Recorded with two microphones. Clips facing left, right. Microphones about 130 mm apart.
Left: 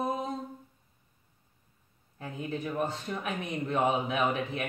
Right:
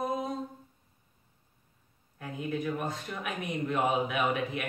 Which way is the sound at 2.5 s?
30° left (ahead or behind).